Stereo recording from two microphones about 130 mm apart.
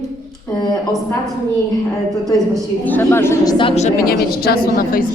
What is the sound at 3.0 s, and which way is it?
Speech, 20° left (ahead or behind).